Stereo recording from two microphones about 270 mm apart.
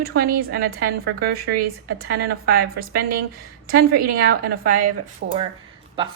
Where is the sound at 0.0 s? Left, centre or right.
Right.